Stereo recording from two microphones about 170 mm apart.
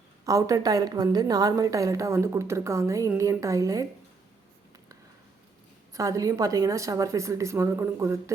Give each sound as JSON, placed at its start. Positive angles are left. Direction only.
{"t": 0.3, "sound": "a woman's voice", "side_deg": -20}
{"t": 5.9, "sound": "a woman's voice", "side_deg": -20}